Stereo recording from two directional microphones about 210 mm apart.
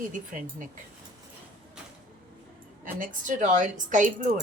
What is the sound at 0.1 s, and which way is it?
Speech, 40° right (ahead or behind).